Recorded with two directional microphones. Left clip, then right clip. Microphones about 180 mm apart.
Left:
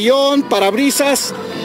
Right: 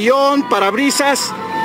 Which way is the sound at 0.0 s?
15° left (ahead or behind).